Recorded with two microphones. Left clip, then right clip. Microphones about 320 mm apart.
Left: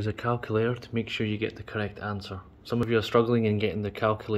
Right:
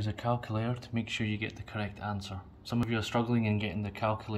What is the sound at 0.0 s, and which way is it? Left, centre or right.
Speech, centre.